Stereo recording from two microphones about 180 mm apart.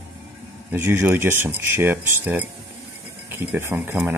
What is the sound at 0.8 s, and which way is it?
Speech, 10° right (ahead or behind).